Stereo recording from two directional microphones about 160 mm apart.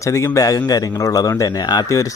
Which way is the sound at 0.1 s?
20° left (ahead or behind).